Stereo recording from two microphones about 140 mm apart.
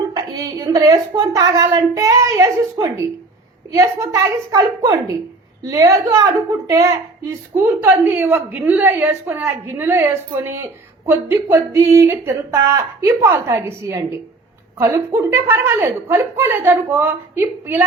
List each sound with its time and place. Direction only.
0.1 s a woman's voice: 25° right (ahead or behind)